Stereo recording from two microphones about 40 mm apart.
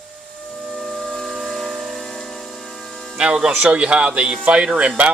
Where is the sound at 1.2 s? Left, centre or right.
Right.